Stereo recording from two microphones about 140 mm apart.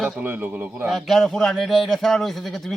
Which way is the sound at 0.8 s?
Centre (ahead or behind).